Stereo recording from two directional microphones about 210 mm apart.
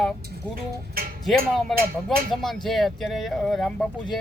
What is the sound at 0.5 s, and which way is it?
Speech, 45° right (ahead or behind).